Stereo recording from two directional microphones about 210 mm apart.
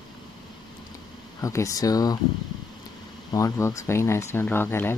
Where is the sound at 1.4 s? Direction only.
15° left (ahead or behind).